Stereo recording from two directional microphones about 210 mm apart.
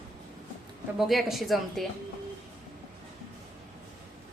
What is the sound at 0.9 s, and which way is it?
Speech, centre (ahead or behind).